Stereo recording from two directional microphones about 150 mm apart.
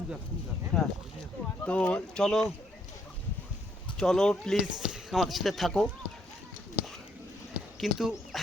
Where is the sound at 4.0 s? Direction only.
5° left (ahead or behind).